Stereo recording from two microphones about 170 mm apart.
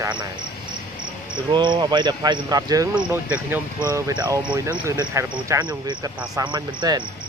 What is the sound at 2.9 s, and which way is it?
Speech, 10° right (ahead or behind).